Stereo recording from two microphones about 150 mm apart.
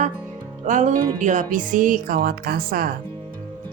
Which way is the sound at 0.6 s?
55° right (ahead or behind).